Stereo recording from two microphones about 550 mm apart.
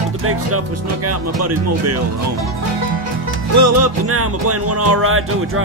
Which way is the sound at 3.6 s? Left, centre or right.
Right.